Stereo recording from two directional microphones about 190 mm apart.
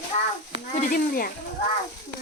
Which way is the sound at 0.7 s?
45° left (ahead or behind).